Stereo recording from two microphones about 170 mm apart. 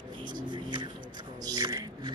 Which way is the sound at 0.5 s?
25° right (ahead or behind).